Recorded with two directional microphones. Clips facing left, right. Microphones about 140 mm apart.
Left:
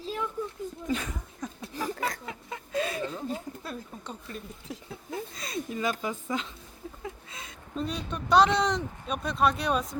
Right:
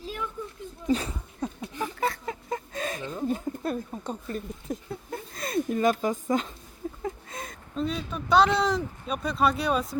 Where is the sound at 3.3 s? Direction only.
50° right (ahead or behind).